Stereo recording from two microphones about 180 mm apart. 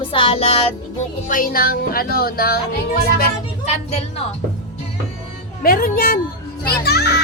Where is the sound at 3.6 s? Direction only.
35° left (ahead or behind).